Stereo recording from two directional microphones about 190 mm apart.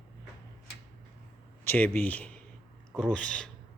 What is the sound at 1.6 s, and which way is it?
A man's voice, 10° left (ahead or behind).